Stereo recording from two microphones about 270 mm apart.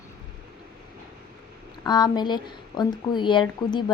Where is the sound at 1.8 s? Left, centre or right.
Centre.